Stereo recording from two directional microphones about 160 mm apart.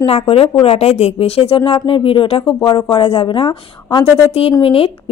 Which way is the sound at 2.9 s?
35° left (ahead or behind).